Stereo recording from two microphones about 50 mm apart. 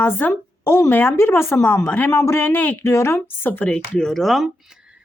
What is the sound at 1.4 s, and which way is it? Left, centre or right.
Speech, left.